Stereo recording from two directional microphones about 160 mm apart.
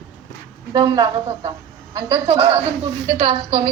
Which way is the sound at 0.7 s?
25° right (ahead or behind).